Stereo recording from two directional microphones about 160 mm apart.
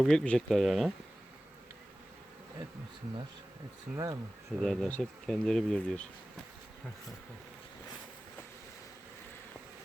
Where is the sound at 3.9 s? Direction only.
20° right (ahead or behind).